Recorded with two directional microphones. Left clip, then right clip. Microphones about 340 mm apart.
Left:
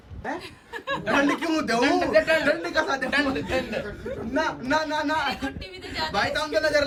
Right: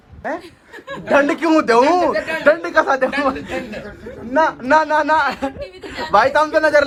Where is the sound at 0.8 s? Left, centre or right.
Centre.